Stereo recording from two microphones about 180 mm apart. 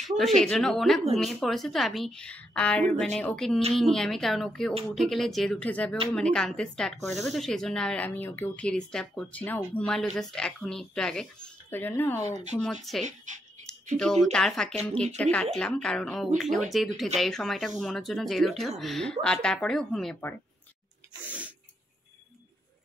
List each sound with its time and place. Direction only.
0.2 s speech: centre (ahead or behind)
13.0 s speech: 45° right (ahead or behind)
13.6 s a sound: 45° right (ahead or behind)
13.9 s speech: 5° left (ahead or behind)
21.3 s sneeze: 10° right (ahead or behind)